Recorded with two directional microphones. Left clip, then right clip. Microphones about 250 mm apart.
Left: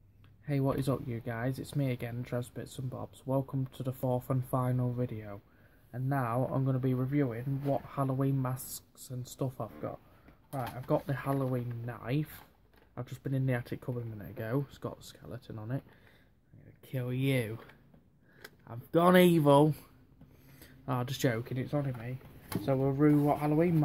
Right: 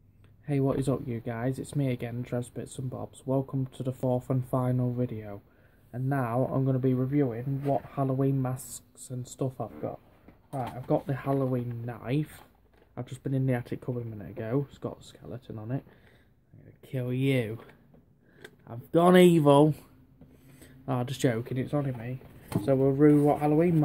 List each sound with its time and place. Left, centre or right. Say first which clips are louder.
0.5 s speech: right 4 dB; centre
16.8 s speech: right 5 dB; centre